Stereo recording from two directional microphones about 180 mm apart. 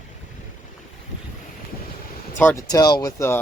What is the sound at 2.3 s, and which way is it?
Speech, 15° left (ahead or behind).